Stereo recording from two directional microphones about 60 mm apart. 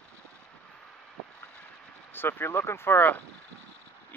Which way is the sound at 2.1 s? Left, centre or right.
Left.